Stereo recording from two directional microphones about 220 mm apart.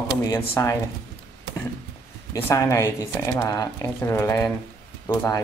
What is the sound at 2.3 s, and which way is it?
Speech, 15° left (ahead or behind).